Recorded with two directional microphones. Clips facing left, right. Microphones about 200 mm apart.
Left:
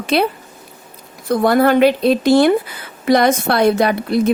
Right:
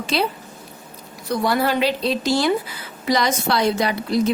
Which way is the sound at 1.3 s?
55° left (ahead or behind).